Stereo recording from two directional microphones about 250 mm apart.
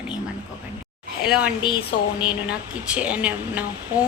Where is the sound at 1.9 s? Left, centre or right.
Left.